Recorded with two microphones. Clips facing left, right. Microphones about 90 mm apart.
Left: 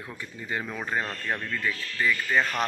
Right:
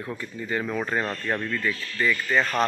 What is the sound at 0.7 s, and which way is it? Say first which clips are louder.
Speech: right 3 dB; centre (ahead or behind).